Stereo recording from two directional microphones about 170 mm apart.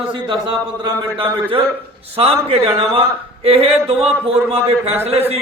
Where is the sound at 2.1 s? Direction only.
35° right (ahead or behind).